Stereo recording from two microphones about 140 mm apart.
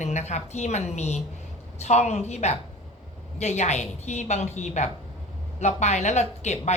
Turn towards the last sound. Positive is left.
turn(degrees=55)  # may be behind; listen again after turning